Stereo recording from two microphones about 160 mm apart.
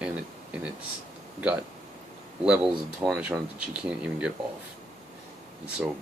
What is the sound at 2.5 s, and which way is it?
Speech, 5° right (ahead or behind).